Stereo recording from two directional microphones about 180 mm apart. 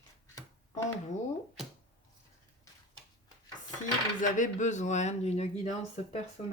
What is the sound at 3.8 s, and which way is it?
A woman's voice, 45° left (ahead or behind).